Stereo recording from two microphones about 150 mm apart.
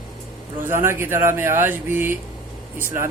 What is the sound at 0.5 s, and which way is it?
Speech, 15° right (ahead or behind).